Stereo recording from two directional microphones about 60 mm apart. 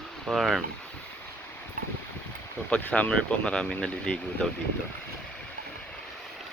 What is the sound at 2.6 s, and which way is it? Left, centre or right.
Speech, centre.